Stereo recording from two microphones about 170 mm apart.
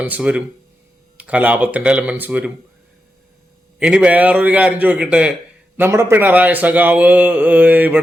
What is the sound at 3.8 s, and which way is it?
Speech, 5° right (ahead or behind).